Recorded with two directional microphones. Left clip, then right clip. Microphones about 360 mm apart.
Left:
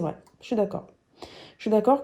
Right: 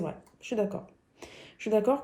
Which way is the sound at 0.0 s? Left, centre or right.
Left.